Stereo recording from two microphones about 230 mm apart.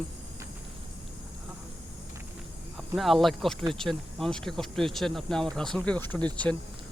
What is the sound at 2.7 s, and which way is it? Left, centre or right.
Speech, centre.